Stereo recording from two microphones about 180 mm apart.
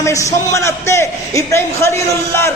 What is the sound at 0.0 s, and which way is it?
A man's voice, 15° left (ahead or behind).